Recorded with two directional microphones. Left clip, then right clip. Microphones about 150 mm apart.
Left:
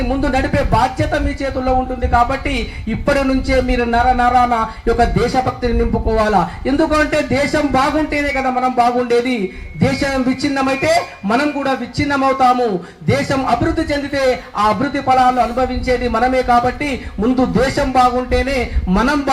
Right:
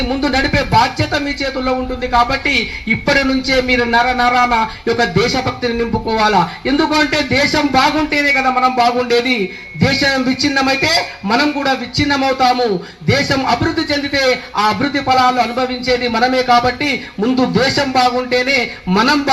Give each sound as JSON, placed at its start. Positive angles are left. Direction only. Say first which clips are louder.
{"t": 0.2, "sound": "music", "louder": "right 3 dB", "side_deg": -25}